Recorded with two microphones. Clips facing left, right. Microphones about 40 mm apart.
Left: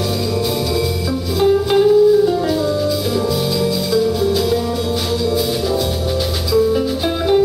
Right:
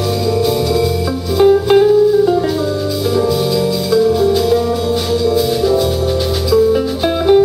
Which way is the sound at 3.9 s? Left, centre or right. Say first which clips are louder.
Right 6 dB; centre.